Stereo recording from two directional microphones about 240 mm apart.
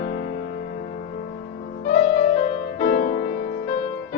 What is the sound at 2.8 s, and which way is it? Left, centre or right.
Music, left.